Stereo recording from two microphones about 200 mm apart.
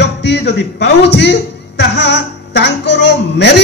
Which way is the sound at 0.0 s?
60° left (ahead or behind).